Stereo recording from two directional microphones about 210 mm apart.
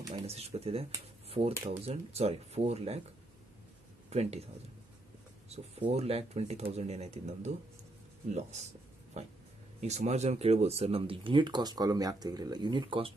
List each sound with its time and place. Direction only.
0.1 s speech: 30° right (ahead or behind)
4.1 s speech: 30° right (ahead or behind)
5.5 s speech: 30° right (ahead or behind)